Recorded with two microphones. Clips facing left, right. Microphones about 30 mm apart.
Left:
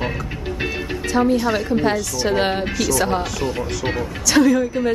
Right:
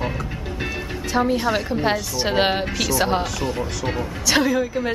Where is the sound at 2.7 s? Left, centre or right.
Centre.